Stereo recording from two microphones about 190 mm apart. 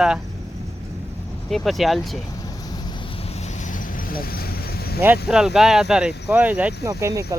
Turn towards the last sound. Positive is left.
turn(degrees=-15)  # may be behind; listen again after turning